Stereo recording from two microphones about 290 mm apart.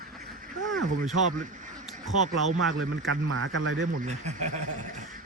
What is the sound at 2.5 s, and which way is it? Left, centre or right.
A man's voice, right.